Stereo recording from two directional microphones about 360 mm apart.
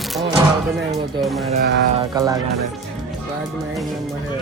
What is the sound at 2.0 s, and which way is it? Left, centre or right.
Speech, centre.